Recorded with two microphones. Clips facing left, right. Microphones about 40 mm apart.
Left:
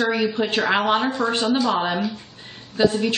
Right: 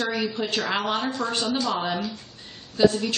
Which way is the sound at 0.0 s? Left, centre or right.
Centre.